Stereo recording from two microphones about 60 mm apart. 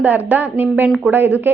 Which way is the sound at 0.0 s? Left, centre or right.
Right.